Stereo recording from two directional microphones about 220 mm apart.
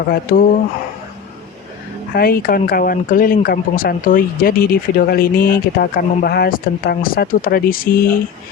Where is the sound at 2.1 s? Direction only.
40° left (ahead or behind).